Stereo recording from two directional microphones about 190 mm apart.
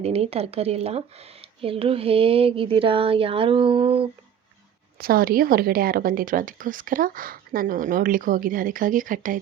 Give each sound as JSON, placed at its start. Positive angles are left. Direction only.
{"t": 0.0, "sound": "speech", "side_deg": -30}
{"t": 4.9, "sound": "speech", "side_deg": -50}